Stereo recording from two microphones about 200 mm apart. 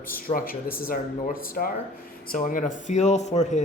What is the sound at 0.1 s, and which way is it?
Speech, 45° left (ahead or behind).